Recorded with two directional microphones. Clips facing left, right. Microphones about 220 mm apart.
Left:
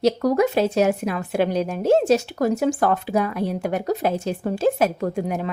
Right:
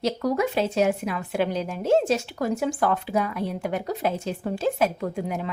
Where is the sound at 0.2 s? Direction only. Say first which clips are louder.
Left 5 dB; 40° left (ahead or behind).